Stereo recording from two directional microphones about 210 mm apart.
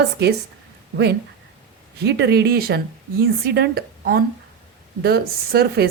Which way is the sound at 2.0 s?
50° right (ahead or behind).